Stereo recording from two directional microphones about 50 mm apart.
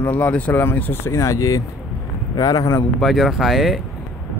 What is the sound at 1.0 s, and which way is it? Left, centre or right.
Speech, left.